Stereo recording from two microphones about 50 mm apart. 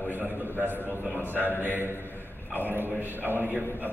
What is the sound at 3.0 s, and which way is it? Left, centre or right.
Speech, right.